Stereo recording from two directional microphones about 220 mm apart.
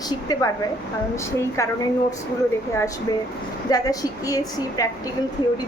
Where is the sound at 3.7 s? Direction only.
15° left (ahead or behind).